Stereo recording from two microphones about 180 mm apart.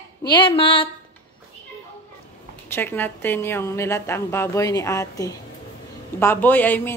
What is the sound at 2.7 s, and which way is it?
A woman's voice, 10° left (ahead or behind).